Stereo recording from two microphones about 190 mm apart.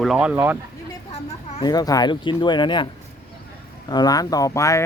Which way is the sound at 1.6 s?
20° left (ahead or behind).